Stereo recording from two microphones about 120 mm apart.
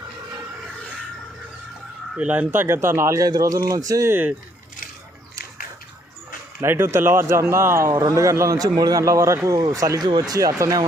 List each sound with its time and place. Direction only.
2.1 s a man's voice: 10° right (ahead or behind)
6.6 s a man's voice: 20° right (ahead or behind)